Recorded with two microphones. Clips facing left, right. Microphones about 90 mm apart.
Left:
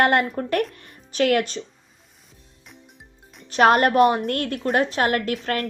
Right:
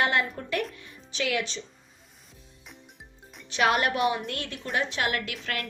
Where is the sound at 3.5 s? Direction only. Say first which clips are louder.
Left 8 dB; 45° left (ahead or behind).